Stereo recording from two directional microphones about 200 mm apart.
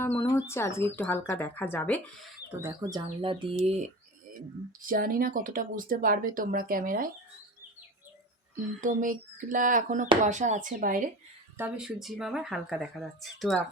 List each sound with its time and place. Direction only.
0.0 s speech: 10° left (ahead or behind)
2.6 s speech: 15° right (ahead or behind)
3.2 s speech: 25° right (ahead or behind)
4.9 s speech: 45° right (ahead or behind)
8.8 s a sound: 40° right (ahead or behind)
11.5 s speech: 5° right (ahead or behind)